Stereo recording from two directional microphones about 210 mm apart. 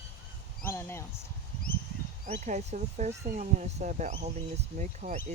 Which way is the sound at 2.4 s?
35° right (ahead or behind).